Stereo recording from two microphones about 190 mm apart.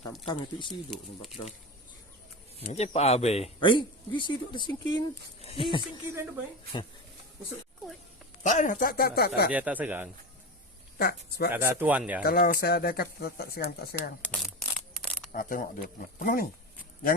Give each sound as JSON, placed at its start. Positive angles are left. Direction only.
{"t": 0.3, "sound": "speech", "side_deg": 25}
{"t": 0.9, "sound": "speech", "side_deg": 0}
{"t": 2.6, "sound": "speech", "side_deg": 35}
{"t": 8.4, "sound": "speech", "side_deg": 40}
{"t": 9.5, "sound": "speech", "side_deg": -5}
{"t": 10.9, "sound": "speech", "side_deg": 55}
{"t": 11.5, "sound": "speech", "side_deg": -10}
{"t": 12.2, "sound": "speech", "side_deg": 50}
{"t": 14.2, "sound": "a sound", "side_deg": 0}
{"t": 15.3, "sound": "speech", "side_deg": 45}